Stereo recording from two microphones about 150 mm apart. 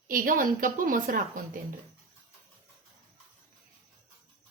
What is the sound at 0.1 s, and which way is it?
A woman's voice, 65° right (ahead or behind).